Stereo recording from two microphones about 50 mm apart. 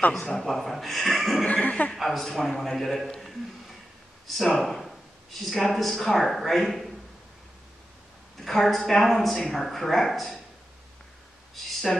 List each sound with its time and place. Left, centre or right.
0.3 s speech: centre
1.4 s speech: left
2.0 s speech: centre
4.4 s speech: centre
8.4 s a woman's voice: centre
11.9 s a woman's voice: centre